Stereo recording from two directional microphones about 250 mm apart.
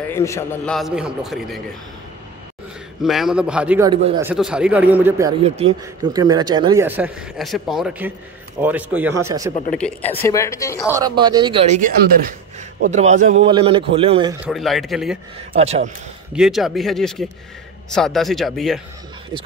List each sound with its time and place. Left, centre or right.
0.1 s a man's voice: centre
3.0 s a man's voice: centre
3.9 s speech: centre
4.3 s a man's voice: centre
5.6 s speech: right
9.8 s speech: centre
10.9 s speech: centre
14.4 s a man's voice: centre
15.5 s speech: right
16.3 s a man's voice: centre